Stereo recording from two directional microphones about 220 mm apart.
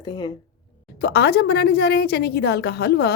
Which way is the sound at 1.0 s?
45° left (ahead or behind).